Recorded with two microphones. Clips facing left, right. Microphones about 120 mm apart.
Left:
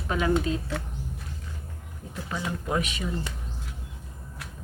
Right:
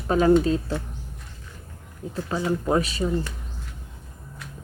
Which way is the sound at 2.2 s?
35° right (ahead or behind).